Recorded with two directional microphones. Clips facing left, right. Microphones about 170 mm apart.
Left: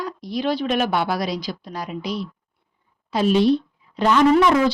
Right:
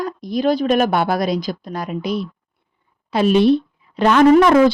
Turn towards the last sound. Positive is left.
turn(degrees=-55)  # may be behind; listen again after turning